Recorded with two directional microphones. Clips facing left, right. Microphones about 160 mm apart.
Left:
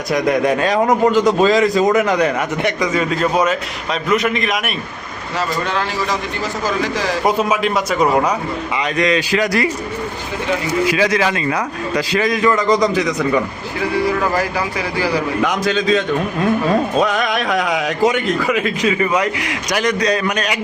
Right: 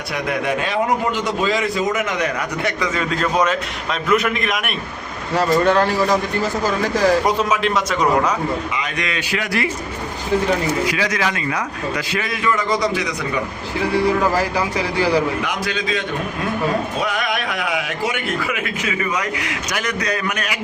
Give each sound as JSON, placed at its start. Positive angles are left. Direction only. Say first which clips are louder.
{"t": 0.1, "sound": "a man's voice", "louder": "left 6 dB", "side_deg": 40}
{"t": 2.6, "sound": "a man's voice", "louder": "left 3 dB", "side_deg": 15}
{"t": 5.6, "sound": "a man's voice", "louder": "right 5 dB", "side_deg": -50}
{"t": 7.3, "sound": "a man's voice", "louder": "left 2 dB", "side_deg": 10}
{"t": 8.7, "sound": "a man's voice", "louder": "left 8 dB", "side_deg": 35}
{"t": 10.8, "sound": "a man's voice", "louder": "left 5 dB", "side_deg": 25}
{"t": 15.6, "sound": "a man's voice", "louder": "left 7 dB", "side_deg": 40}
{"t": 17.0, "sound": "a man's voice", "louder": "left 5 dB", "side_deg": 40}